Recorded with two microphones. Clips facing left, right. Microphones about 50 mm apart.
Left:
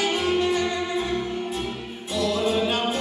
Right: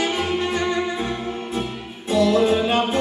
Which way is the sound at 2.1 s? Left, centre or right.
Right.